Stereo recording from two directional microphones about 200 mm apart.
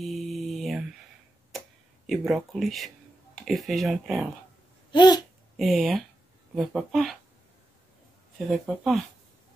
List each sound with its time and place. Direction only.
0.0 s mantra: centre (ahead or behind)
2.0 s speech: centre (ahead or behind)
4.9 s babbling: 20° left (ahead or behind)
5.6 s speech: centre (ahead or behind)
8.5 s speech: centre (ahead or behind)